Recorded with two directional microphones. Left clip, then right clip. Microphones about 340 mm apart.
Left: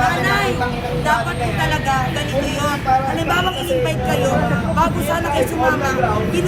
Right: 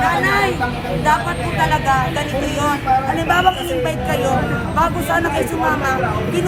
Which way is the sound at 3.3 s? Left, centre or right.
Centre.